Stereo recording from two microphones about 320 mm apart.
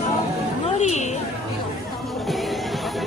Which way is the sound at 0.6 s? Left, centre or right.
Left.